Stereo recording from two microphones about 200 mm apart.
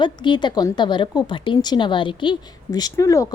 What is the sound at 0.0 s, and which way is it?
A woman's voice, 20° left (ahead or behind).